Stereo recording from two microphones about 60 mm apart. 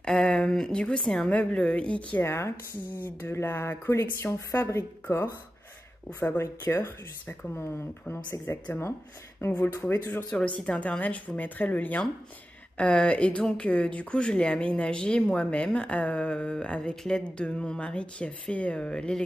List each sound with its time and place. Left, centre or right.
0.0 s speech: centre
2.2 s speech: left
3.0 s speech: left
3.9 s speech: left
6.1 s speech: left
9.8 s speech: left
10.6 s speech: centre